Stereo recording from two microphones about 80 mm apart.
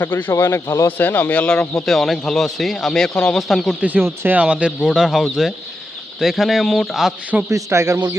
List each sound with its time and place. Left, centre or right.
0.0 s a man's voice: left
0.9 s speech: left
1.8 s speech: centre
3.8 s speech: centre
4.4 s speech: centre
4.9 s speech: centre
7.5 s speech: right